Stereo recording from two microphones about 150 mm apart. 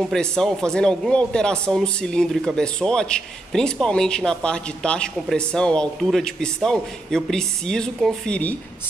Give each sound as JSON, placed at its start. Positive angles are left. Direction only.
{"t": 0.0, "sound": "a man's voice", "side_deg": 5}